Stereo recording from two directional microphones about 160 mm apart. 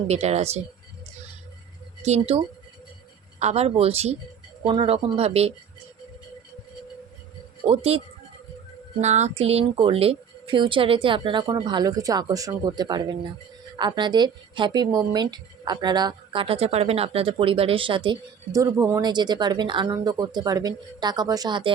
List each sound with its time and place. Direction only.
0.1 s speech: 45° right (ahead or behind)
2.0 s speech: 40° right (ahead or behind)
7.7 s speech: 40° right (ahead or behind)